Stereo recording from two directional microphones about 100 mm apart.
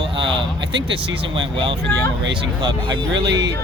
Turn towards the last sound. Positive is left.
turn(degrees=-50)  # may be behind; listen again after turning